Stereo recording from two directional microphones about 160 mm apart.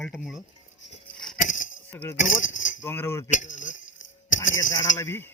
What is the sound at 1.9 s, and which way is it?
Speech, 10° left (ahead or behind).